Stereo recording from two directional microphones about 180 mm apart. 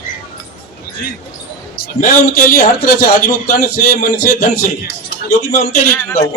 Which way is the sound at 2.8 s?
50° left (ahead or behind).